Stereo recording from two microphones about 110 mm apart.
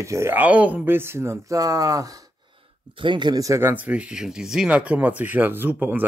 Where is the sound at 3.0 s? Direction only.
45° right (ahead or behind).